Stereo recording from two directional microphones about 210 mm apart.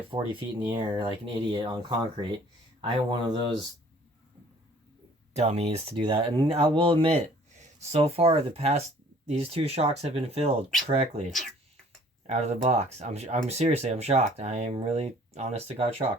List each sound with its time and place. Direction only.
0.1 s speech: 25° right (ahead or behind)
5.3 s speech: 30° right (ahead or behind)
12.3 s speech: 30° right (ahead or behind)